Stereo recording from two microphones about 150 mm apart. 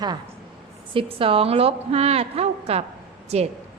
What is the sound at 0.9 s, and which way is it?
A woman's voice, 40° right (ahead or behind).